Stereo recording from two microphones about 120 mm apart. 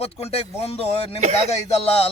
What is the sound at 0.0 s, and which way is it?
A man's voice, 55° left (ahead or behind).